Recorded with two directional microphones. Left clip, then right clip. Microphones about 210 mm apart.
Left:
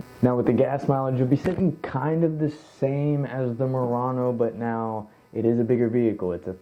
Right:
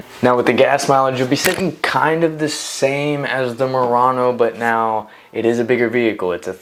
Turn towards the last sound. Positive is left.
turn(degrees=-10)  # may be behind; listen again after turning